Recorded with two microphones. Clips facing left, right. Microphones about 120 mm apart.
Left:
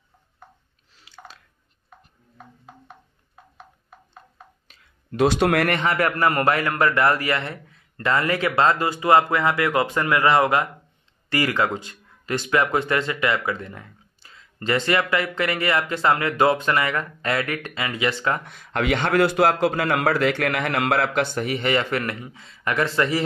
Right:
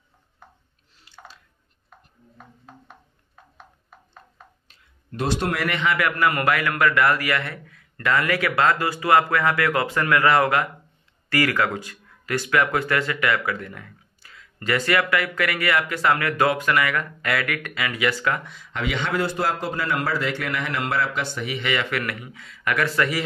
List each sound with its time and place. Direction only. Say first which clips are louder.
0.9 s drip: left 1 dB; 90° left
4.6 s a sound: left 5 dB; 80° left; by 5.8 s 60° left (ahead or behind)
5.8 s speech: left 1 dB; 40° left (ahead or behind)
18.4 s a man's voice: left 4 dB; 55° left (ahead or behind); by 23.2 s 25° left (ahead or behind)